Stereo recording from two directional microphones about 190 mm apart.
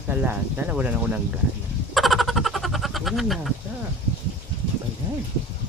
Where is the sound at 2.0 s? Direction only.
Centre (ahead or behind).